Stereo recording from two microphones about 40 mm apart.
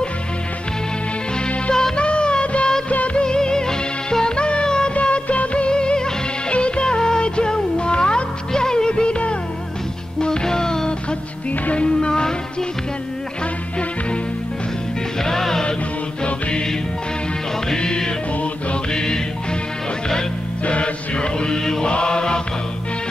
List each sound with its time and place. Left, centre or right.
1.7 s music: centre
2.0 s music of bollywood: left
3.2 s music: left
4.9 s music of bollywood: left
6.5 s music: left
10.2 s music: centre
12.1 s music: centre
15.2 s music: centre
16.3 s music: left
17.7 s music: centre
20.6 s music: left
21.9 s chant: left